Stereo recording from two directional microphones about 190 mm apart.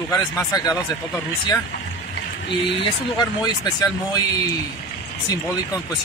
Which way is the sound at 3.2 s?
20° left (ahead or behind).